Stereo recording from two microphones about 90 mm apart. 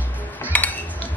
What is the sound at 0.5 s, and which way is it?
Cutlery, 15° left (ahead or behind).